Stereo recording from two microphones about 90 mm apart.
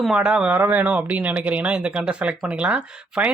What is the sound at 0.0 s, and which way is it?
Speech, 10° right (ahead or behind).